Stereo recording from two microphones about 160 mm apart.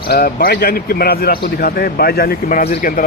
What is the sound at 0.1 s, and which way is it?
A man's voice, 70° left (ahead or behind).